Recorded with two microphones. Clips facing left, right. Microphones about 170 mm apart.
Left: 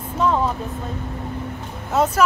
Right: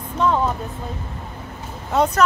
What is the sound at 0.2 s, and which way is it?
Vehicle, centre (ahead or behind).